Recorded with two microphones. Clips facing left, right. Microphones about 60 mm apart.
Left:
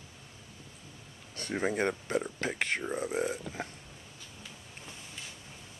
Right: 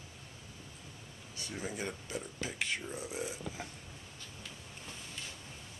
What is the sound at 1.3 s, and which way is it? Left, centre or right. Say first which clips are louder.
Speech: left 10 dB; left.